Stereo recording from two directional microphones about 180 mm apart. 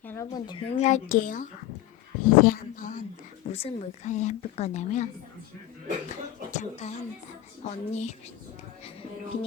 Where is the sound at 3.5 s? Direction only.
35° left (ahead or behind).